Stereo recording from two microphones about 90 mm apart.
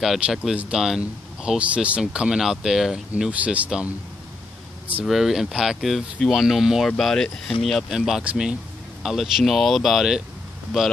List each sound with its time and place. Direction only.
0.0 s speech: 5° right (ahead or behind)
5.0 s speech: 5° right (ahead or behind)
9.0 s speech: centre (ahead or behind)